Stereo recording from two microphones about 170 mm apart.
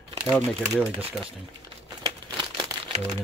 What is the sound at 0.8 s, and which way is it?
Speech, 5° right (ahead or behind).